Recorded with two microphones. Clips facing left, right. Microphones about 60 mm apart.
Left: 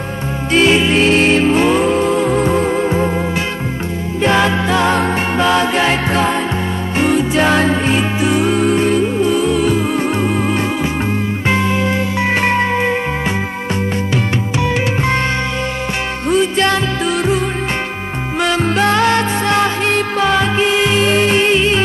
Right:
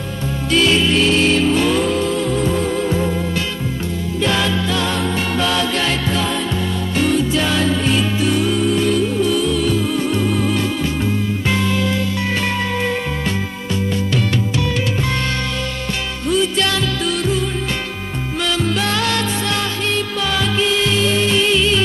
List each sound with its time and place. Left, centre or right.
0.5 s music: left
4.2 s music: left
5.4 s music: left
6.0 s music: left
8.5 s music: left
14.1 s music: left
16.3 s music: left
18.4 s music: left